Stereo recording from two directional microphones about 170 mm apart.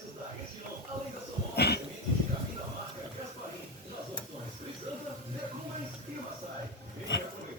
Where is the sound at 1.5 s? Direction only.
75° left (ahead or behind).